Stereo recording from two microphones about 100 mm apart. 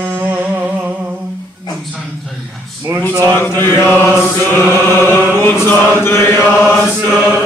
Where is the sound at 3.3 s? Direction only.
25° left (ahead or behind).